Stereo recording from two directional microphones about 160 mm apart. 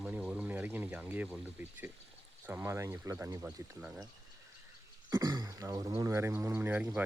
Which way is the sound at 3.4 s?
5° right (ahead or behind).